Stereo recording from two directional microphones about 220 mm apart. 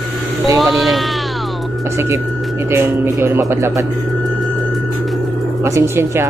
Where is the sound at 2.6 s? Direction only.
10° right (ahead or behind).